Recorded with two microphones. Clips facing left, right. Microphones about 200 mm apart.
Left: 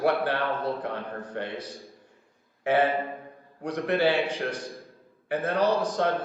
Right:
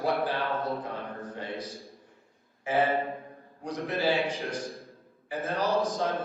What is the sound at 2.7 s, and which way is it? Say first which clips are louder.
A man's voice: left 3 dB; 65° left (ahead or behind).